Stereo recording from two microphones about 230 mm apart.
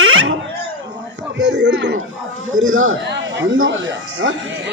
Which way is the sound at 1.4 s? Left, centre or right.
Right.